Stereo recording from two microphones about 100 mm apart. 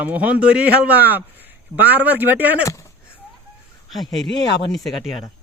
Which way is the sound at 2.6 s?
30° left (ahead or behind).